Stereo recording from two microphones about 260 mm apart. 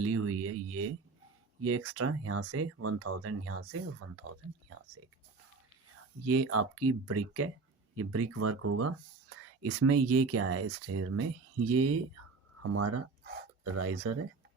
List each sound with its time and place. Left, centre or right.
0.0 s a sound: right
1.6 s speech: right
6.2 s speech: right